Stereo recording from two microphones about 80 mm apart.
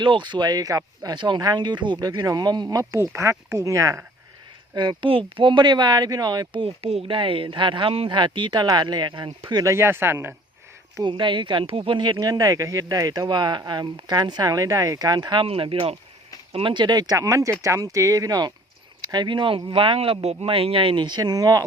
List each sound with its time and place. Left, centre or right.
0.0 s speech: right
1.1 s speech: right
2.0 s speech: right
3.2 s speech: right
4.7 s speech: right
7.1 s speech: right
8.6 s speech: right
9.6 s speech: right
11.0 s speech: right
12.2 s speech: right
13.2 s speech: right
16.6 s speech: right
17.2 s speech: right
19.0 s speech: right